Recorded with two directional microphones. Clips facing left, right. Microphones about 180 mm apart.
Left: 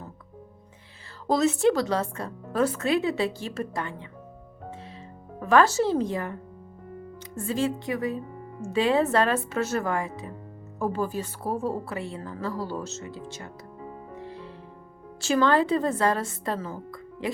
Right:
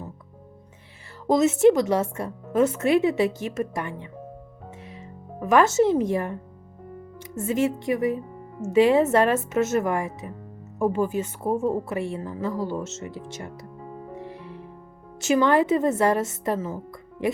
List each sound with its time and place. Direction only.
1.3 s a woman's voice: 20° right (ahead or behind)
5.4 s a woman's voice: 20° right (ahead or behind)
7.3 s a woman's voice: 20° right (ahead or behind)
15.2 s a woman's voice: 20° right (ahead or behind)